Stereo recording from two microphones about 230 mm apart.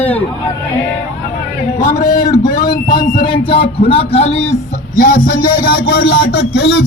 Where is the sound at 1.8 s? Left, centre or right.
Left.